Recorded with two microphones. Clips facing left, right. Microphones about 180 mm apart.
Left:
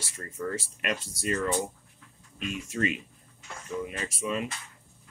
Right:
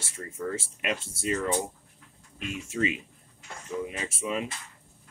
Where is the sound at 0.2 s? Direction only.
15° right (ahead or behind).